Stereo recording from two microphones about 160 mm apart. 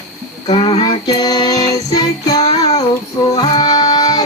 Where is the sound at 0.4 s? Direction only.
35° left (ahead or behind).